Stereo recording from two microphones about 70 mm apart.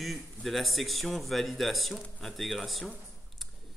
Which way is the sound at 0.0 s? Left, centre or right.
Centre.